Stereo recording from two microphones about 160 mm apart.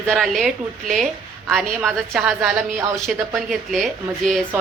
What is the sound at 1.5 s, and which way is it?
Speech, centre (ahead or behind).